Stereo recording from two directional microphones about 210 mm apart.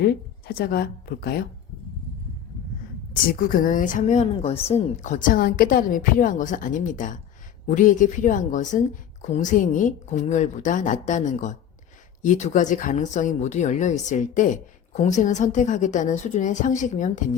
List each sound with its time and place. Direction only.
0.0 s a woman's voice: 50° left (ahead or behind)
3.1 s speech: 45° left (ahead or behind)